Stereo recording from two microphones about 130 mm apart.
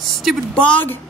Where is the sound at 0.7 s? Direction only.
15° left (ahead or behind).